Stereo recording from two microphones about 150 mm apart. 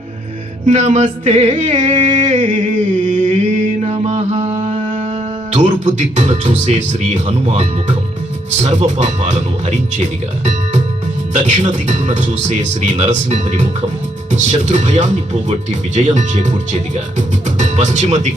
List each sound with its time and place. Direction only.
0.6 s speech: 50° right (ahead or behind)
3.1 s mantra: 55° right (ahead or behind)
5.5 s speech: 50° right (ahead or behind)